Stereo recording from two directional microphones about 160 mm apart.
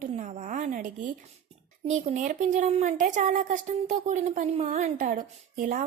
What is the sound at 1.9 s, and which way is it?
Speech, 50° right (ahead or behind).